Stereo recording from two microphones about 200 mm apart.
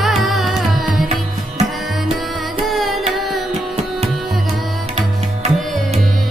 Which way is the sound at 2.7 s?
Centre (ahead or behind).